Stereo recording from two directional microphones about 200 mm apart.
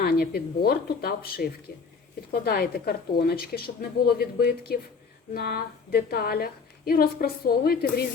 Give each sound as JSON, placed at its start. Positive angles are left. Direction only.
{"t": 0.0, "sound": "a woman's voice", "side_deg": 50}